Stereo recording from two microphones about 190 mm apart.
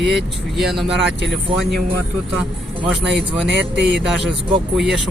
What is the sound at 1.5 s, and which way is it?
Speech, 25° right (ahead or behind).